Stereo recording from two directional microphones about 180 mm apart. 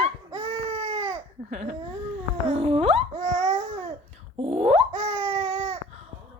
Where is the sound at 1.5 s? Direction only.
40° right (ahead or behind).